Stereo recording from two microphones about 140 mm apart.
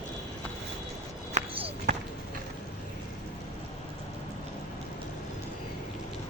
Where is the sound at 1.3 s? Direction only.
45° right (ahead or behind).